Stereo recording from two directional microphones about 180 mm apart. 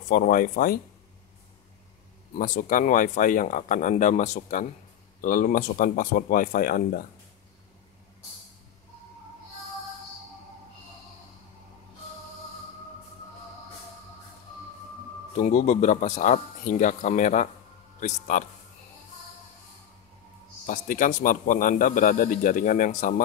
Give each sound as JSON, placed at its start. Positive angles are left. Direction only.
{"t": 0.1, "sound": "a man's voice", "side_deg": 50}
{"t": 2.3, "sound": "a man's voice", "side_deg": 50}
{"t": 15.3, "sound": "a man's voice", "side_deg": 45}
{"t": 20.6, "sound": "a man's voice", "side_deg": 50}